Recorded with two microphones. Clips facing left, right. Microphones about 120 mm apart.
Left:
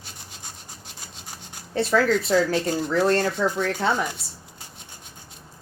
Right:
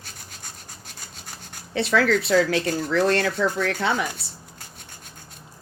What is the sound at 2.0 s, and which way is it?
Speech, 75° right (ahead or behind).